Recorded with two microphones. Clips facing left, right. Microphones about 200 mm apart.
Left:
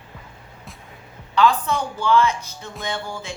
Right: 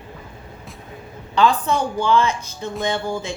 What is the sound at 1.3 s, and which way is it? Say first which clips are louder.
A woman's voice: right 1 dB; 30° right (ahead or behind).